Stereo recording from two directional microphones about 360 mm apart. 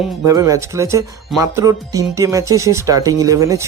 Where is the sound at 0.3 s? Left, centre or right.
Centre.